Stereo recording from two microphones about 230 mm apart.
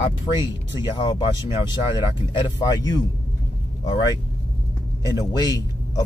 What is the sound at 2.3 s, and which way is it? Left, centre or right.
Speech, centre.